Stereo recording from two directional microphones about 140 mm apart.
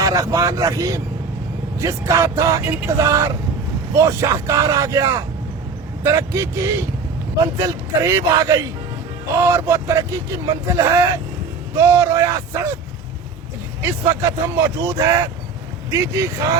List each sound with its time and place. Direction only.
0.0 s speech: 25° right (ahead or behind)
13.8 s speech: 20° right (ahead or behind)